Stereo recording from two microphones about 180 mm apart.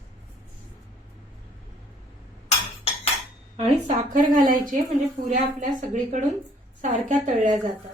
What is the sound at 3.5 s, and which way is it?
A woman's voice, 45° right (ahead or behind).